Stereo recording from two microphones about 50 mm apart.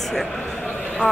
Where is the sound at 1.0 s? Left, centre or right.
Left.